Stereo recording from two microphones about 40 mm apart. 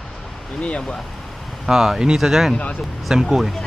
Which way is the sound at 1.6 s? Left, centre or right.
Centre.